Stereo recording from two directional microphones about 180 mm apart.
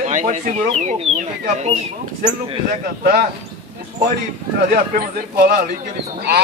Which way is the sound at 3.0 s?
50° right (ahead or behind).